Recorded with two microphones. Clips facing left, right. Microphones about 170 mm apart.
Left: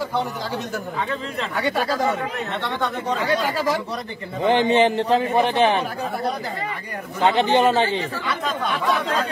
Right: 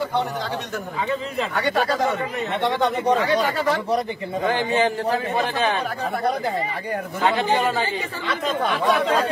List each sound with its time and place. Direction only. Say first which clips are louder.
1.5 s speech: even; centre (ahead or behind)
4.4 s a man's voice: left 4 dB; 20° left (ahead or behind)
7.2 s a man's voice: left 4 dB; 25° left (ahead or behind)